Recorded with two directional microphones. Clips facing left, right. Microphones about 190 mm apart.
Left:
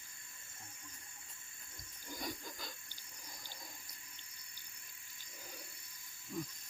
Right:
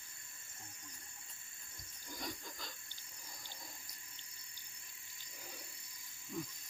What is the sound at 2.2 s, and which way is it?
Wood, 5° left (ahead or behind).